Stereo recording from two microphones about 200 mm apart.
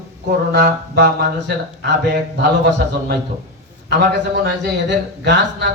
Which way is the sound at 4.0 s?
60° right (ahead or behind).